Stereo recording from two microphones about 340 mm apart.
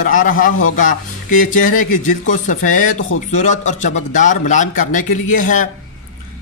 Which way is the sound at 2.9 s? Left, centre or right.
Left.